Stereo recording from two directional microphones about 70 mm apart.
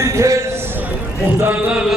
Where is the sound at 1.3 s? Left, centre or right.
Right.